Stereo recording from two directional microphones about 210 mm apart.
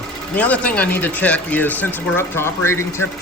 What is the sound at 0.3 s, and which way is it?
Speech, 5° left (ahead or behind).